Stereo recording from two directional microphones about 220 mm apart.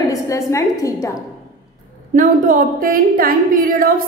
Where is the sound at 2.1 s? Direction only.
40° right (ahead or behind).